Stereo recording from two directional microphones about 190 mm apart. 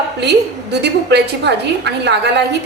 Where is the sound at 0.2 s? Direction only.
65° right (ahead or behind).